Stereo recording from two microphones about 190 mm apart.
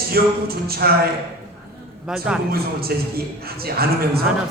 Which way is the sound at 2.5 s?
55° right (ahead or behind).